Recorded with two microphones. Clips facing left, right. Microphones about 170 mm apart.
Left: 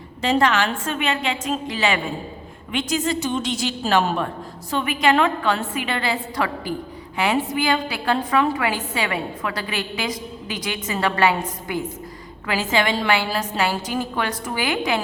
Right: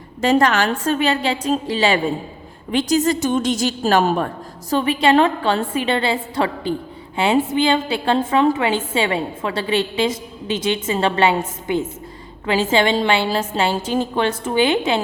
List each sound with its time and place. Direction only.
0.2 s a woman's voice: 45° right (ahead or behind)
4.7 s a woman's voice: 30° right (ahead or behind)